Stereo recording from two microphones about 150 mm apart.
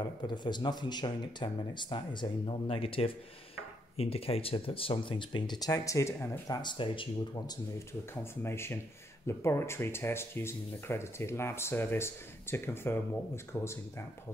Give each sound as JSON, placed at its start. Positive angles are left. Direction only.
{"t": 0.3, "sound": "speech", "side_deg": 30}
{"t": 8.1, "sound": "speech", "side_deg": 15}